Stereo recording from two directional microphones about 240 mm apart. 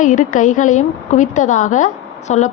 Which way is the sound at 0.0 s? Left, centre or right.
Left.